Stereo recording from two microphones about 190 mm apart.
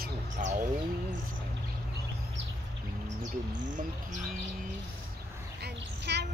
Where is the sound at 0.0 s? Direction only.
45° right (ahead or behind).